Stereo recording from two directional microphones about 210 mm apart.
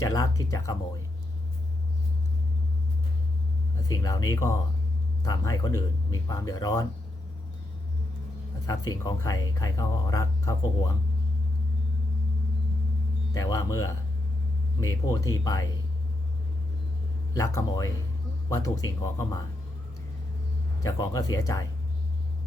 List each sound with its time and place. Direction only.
0.0 s speech: 15° left (ahead or behind)
3.8 s speech: 15° left (ahead or behind)
8.6 s speech: 15° left (ahead or behind)
13.3 s speech: 15° left (ahead or behind)
17.3 s speech: 15° left (ahead or behind)
20.8 s speech: 15° left (ahead or behind)